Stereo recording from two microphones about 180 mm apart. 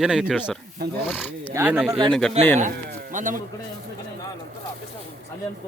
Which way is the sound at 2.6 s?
45° right (ahead or behind).